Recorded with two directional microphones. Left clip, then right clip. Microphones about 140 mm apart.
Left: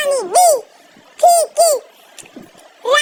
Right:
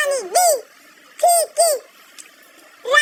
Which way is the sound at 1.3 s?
10° left (ahead or behind).